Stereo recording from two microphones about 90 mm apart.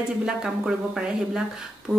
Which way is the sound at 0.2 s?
10° right (ahead or behind).